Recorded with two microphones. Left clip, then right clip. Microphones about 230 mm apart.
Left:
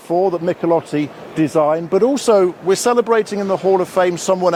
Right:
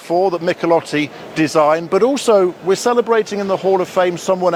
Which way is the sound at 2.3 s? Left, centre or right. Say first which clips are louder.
Left 1 dB; centre.